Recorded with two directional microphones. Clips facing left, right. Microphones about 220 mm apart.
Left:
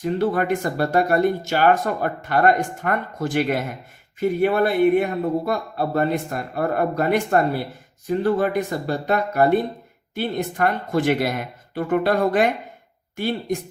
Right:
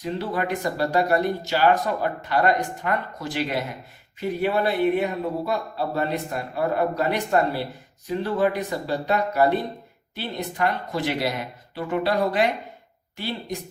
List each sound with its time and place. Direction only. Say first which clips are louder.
0.0 s speech: left 6 dB; 50° left (ahead or behind)